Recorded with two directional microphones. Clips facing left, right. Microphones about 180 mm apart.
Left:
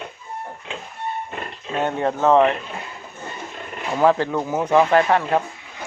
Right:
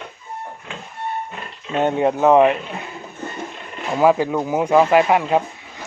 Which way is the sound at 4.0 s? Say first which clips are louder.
Right 2 dB; 10° right (ahead or behind).